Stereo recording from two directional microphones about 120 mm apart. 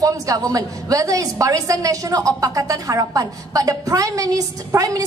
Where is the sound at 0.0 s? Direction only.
30° right (ahead or behind).